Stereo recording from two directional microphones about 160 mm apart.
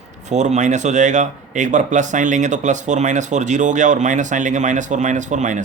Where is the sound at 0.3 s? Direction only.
45° right (ahead or behind).